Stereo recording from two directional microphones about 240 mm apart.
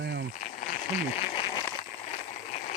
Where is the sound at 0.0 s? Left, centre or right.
Right.